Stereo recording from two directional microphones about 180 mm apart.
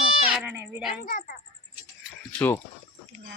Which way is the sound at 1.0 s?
50° left (ahead or behind).